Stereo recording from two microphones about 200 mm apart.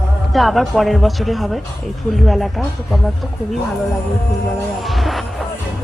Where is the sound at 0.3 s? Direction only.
Centre (ahead or behind).